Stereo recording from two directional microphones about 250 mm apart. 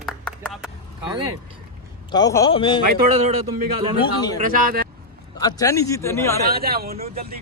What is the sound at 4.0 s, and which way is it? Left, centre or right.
Speech, centre.